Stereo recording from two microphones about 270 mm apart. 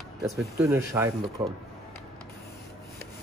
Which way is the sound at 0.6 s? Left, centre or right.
Centre.